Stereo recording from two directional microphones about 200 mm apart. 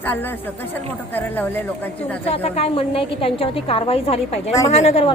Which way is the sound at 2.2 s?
30° left (ahead or behind).